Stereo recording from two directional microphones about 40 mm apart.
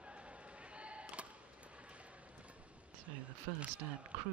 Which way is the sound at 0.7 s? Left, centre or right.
Right.